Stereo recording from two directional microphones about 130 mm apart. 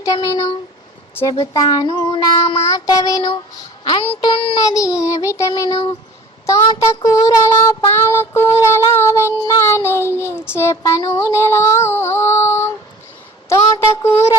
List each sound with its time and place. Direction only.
0.0 s child singing: 25° left (ahead or behind)
3.8 s a child's voice: 45° left (ahead or behind)
4.6 s child singing: 25° left (ahead or behind)
6.7 s child singing: 25° left (ahead or behind)